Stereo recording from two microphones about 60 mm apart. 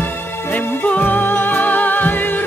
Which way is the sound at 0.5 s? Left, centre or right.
Left.